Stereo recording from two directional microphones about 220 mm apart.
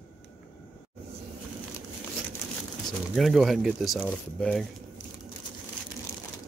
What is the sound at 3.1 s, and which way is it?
Speech, centre (ahead or behind).